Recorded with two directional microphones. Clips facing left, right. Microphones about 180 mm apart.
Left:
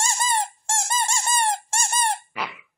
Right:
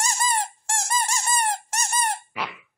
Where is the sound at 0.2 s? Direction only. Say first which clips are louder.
Left 1 dB; 25° left (ahead or behind).